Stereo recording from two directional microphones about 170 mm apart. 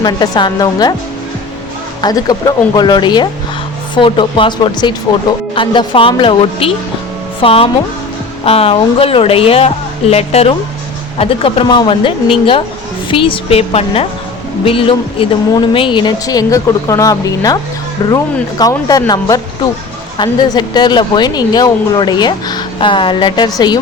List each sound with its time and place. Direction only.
0.0 s speech: 25° left (ahead or behind)
2.0 s speech: 25° left (ahead or behind)